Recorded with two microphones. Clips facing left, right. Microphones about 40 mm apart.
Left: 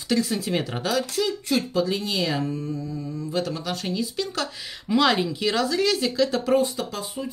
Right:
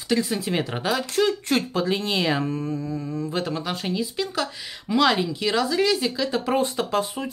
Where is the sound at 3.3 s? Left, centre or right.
Right.